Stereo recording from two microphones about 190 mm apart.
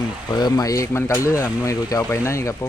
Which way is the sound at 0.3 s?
20° left (ahead or behind).